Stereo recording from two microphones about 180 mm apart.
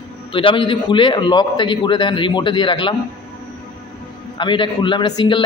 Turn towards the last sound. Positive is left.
turn(degrees=25)  # may be behind; listen again after turning